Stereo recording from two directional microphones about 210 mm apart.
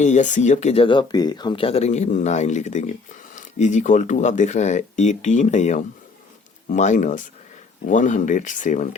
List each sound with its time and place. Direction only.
0.0 s speech: 35° left (ahead or behind)